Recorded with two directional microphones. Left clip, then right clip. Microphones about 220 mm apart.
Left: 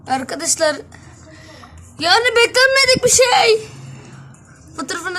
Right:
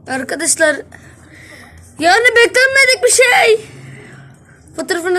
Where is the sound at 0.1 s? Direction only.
Centre (ahead or behind).